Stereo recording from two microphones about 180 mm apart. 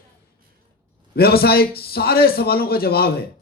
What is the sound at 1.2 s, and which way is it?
Speech, 60° left (ahead or behind).